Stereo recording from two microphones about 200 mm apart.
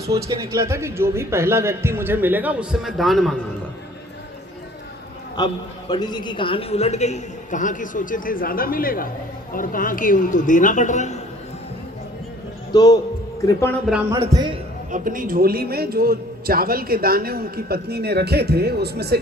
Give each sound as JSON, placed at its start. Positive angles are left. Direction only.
{"t": 0.3, "sound": "a man's voice", "side_deg": -15}
{"t": 5.4, "sound": "a man's voice", "side_deg": 20}
{"t": 12.7, "sound": "speech", "side_deg": 20}
{"t": 14.1, "sound": "a man's voice", "side_deg": -20}
{"t": 14.9, "sound": "a man's voice", "side_deg": -45}